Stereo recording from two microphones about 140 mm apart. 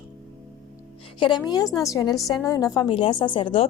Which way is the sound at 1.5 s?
30° left (ahead or behind).